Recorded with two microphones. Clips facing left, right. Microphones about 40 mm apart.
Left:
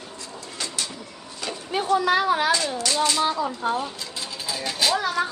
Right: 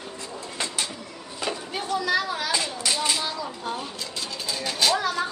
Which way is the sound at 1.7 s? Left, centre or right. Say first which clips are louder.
Left 6 dB; left.